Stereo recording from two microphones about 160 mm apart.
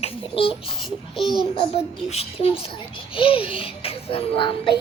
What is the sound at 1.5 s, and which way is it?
A child's voice, 40° left (ahead or behind).